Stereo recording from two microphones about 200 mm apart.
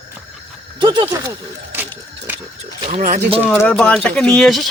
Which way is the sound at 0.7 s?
25° right (ahead or behind).